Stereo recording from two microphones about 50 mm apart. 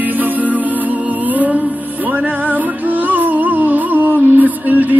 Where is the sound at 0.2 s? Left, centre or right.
Right.